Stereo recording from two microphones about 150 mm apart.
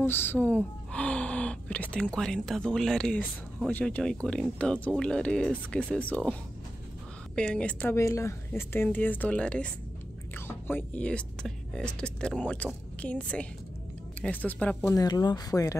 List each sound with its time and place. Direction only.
0.0 s speech: 15° left (ahead or behind)
7.3 s speech: 5° left (ahead or behind)
14.9 s speech: 25° left (ahead or behind)